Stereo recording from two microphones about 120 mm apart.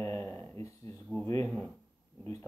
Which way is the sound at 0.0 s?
25° left (ahead or behind).